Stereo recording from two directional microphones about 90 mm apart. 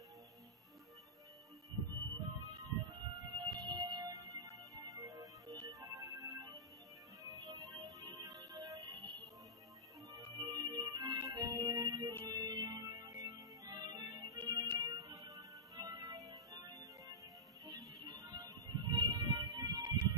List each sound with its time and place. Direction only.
2.8 s music: 50° right (ahead or behind)
10.4 s music: 55° right (ahead or behind)
14.4 s music: 60° right (ahead or behind)